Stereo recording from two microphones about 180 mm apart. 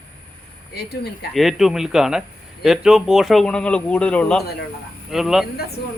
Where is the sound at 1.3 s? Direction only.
Centre (ahead or behind).